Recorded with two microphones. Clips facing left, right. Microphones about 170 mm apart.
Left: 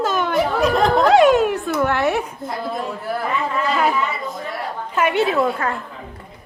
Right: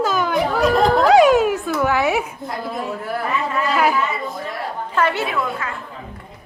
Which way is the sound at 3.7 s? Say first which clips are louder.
Right 1 dB; centre (ahead or behind).